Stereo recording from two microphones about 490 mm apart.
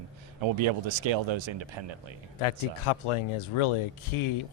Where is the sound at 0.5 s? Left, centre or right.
Right.